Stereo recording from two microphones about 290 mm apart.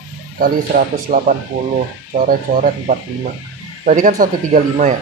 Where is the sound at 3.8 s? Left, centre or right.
Right.